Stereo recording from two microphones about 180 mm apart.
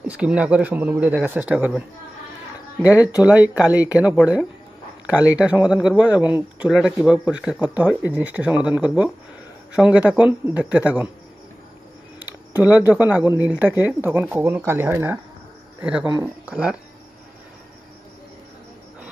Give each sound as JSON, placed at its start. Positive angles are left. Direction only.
{"t": 0.0, "sound": "speech", "side_deg": -5}
{"t": 2.9, "sound": "speech", "side_deg": 20}
{"t": 3.2, "sound": "speech", "side_deg": -10}
{"t": 12.5, "sound": "speech", "side_deg": -10}